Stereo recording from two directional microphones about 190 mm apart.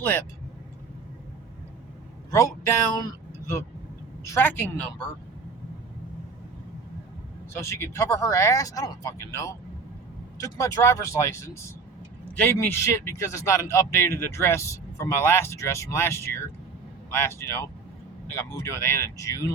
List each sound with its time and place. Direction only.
2.3 s a man's voice: 15° left (ahead or behind)
4.2 s a woman's voice: 15° left (ahead or behind)
7.5 s a man's voice: 15° left (ahead or behind)